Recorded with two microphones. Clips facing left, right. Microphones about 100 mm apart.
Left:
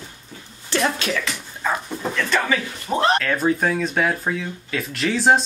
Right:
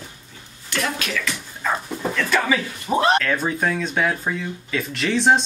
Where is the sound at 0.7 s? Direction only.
30° left (ahead or behind).